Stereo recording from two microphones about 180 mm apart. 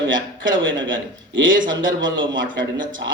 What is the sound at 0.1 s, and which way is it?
A man's voice, 90° right.